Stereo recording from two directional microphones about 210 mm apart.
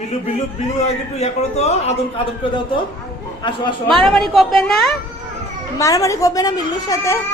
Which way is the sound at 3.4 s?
20° left (ahead or behind).